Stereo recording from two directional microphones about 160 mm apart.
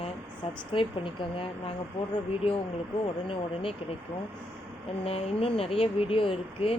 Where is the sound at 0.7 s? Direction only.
30° left (ahead or behind).